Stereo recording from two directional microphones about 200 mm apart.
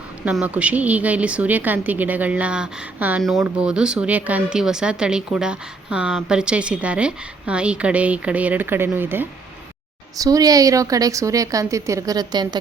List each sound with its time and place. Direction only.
0.3 s a woman's voice: 5° right (ahead or behind)